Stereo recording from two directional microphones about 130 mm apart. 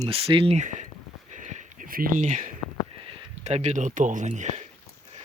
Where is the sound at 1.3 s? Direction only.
65° right (ahead or behind).